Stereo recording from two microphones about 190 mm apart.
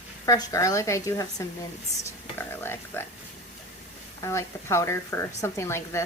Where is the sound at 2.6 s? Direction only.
10° left (ahead or behind).